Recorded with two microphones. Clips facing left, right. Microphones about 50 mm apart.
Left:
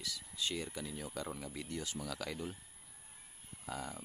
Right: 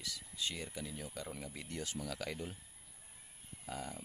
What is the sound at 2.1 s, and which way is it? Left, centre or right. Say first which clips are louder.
Speech: even; right.